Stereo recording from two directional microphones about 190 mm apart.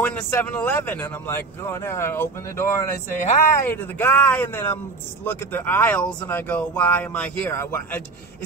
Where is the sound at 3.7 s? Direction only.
10° left (ahead or behind).